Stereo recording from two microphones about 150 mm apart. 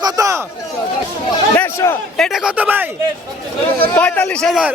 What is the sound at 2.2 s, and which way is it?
Speech, centre (ahead or behind).